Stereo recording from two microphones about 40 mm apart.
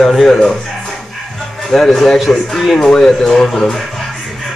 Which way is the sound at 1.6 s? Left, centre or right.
Centre.